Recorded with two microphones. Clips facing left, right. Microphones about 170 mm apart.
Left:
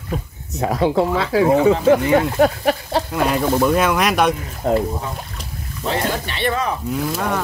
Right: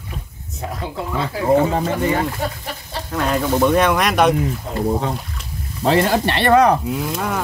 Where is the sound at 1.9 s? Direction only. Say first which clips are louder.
Left 5 dB; 75° left (ahead or behind).